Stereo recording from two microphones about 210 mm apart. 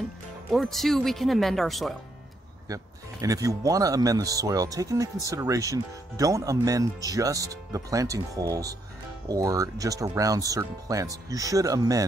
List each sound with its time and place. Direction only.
0.5 s speech: centre (ahead or behind)
2.7 s speech: 15° right (ahead or behind)